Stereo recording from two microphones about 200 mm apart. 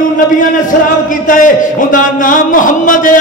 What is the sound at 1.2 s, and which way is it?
A man's voice, 40° left (ahead or behind).